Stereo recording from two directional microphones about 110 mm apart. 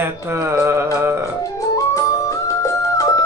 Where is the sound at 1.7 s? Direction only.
30° left (ahead or behind).